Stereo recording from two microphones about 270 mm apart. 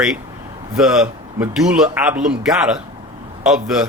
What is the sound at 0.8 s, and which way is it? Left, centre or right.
Speech, centre.